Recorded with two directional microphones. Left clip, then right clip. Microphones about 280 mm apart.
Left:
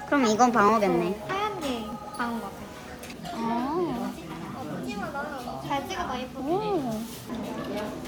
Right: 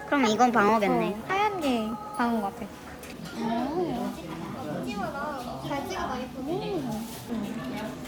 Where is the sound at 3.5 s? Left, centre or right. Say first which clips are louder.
Left 1 dB; centre.